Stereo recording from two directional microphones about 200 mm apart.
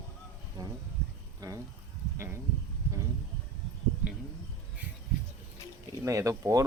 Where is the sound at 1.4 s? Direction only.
20° right (ahead or behind).